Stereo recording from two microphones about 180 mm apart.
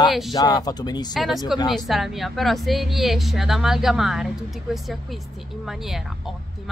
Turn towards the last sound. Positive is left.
turn(degrees=0)  # may be behind; listen again after turning